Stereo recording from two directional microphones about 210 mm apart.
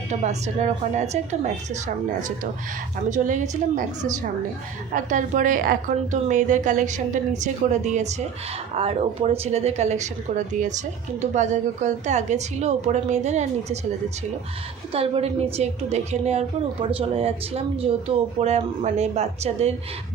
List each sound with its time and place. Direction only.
0.1 s speech: 30° right (ahead or behind)
3.1 s speech: 35° right (ahead or behind)
14.9 s a woman's voice: 25° right (ahead or behind)